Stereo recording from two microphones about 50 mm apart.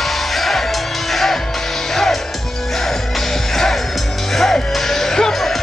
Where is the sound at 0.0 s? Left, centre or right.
Centre.